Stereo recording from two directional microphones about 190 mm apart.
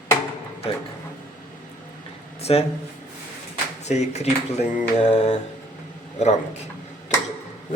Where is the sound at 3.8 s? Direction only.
35° left (ahead or behind).